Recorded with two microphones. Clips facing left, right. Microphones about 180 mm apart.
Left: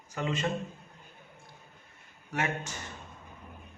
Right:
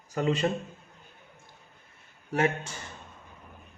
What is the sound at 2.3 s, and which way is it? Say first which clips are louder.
Speech: right 6 dB; 30° right (ahead or behind).